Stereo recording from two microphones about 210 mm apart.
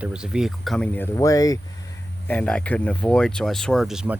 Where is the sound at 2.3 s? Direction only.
5° left (ahead or behind).